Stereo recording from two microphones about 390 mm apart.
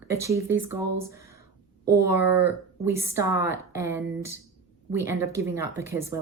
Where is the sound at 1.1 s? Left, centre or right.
Centre.